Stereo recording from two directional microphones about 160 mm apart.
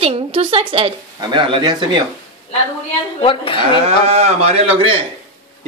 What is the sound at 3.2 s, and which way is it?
Speech, 35° left (ahead or behind).